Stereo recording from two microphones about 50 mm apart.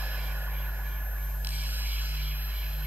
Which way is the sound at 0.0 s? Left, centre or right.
Right.